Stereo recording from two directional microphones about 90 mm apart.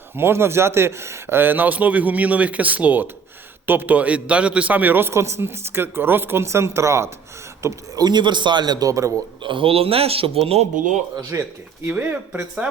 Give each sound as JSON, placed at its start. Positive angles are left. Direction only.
{"t": 0.2, "sound": "a man's voice", "side_deg": -25}
{"t": 7.9, "sound": "a man's voice", "side_deg": -55}
{"t": 9.4, "sound": "speech", "side_deg": -70}
{"t": 11.3, "sound": "a man's voice", "side_deg": -30}